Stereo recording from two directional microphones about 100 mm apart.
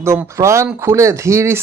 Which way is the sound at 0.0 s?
30° right (ahead or behind).